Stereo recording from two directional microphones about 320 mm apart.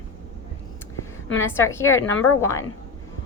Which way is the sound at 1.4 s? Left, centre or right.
Centre.